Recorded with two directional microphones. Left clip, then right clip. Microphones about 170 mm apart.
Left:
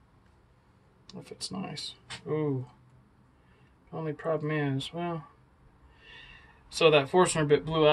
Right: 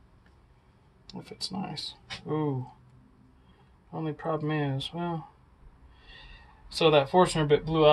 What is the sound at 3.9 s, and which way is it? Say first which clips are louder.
Speech: even; 25° left (ahead or behind).